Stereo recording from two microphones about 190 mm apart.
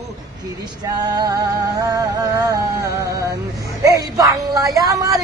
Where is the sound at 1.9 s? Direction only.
20° right (ahead or behind).